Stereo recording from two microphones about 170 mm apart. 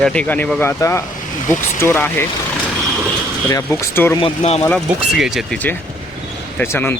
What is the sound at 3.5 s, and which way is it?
Speech, 15° left (ahead or behind).